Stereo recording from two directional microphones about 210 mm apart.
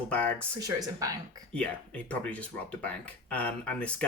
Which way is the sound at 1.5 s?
5° left (ahead or behind).